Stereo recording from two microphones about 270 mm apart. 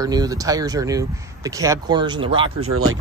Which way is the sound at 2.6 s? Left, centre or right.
Right.